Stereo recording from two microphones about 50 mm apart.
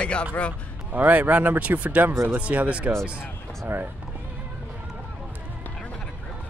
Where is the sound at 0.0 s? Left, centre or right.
Left.